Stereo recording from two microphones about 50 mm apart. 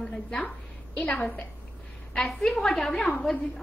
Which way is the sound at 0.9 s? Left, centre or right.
Left.